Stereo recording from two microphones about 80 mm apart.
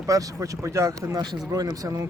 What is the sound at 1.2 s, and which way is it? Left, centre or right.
Speech, right.